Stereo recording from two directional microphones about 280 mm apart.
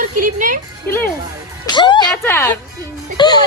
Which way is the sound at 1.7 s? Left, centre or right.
Centre.